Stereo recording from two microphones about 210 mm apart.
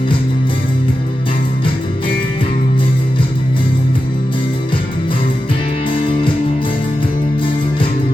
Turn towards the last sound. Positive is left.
turn(degrees=25)  # may be behind; listen again after turning